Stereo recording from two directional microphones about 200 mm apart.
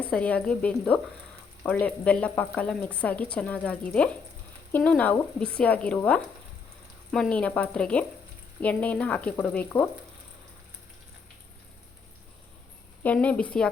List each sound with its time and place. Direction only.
0.0 s a woman's voice: 5° left (ahead or behind)
13.0 s a woman's voice: 5° left (ahead or behind)